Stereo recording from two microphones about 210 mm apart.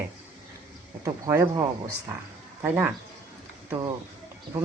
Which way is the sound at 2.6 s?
10° right (ahead or behind).